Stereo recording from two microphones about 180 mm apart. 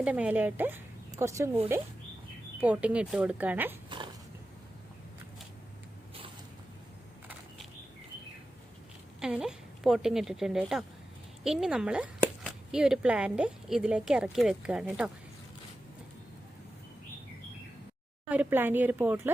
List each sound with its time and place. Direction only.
0.0 s speech: 10° right (ahead or behind)
2.6 s speech: 10° right (ahead or behind)
3.8 s dog: 25° right (ahead or behind)
9.2 s speech: 5° right (ahead or behind)
18.3 s speech: 10° right (ahead or behind)